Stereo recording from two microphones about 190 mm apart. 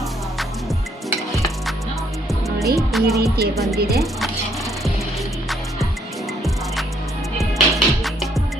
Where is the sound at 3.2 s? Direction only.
55° right (ahead or behind).